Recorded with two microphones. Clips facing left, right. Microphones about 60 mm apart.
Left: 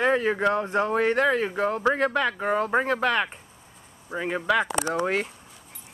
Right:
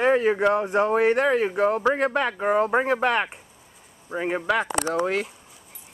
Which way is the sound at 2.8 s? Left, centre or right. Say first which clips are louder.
Right 2 dB; right.